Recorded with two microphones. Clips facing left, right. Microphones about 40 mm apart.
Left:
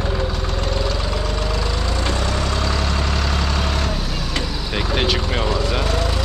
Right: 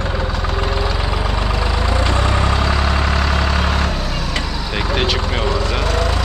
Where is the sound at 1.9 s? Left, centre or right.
Right.